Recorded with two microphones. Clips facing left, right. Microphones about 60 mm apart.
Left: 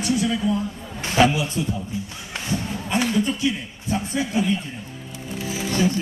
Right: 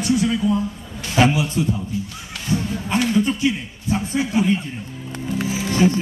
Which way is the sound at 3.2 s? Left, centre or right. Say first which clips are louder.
Right 3 dB; right.